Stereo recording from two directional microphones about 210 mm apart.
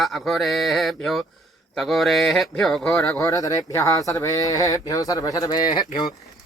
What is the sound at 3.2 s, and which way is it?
Speech, 15° left (ahead or behind).